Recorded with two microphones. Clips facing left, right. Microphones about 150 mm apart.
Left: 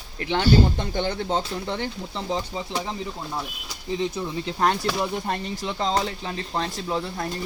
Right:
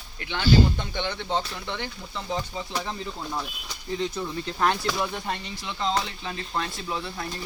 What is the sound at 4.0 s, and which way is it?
Speech, 20° left (ahead or behind).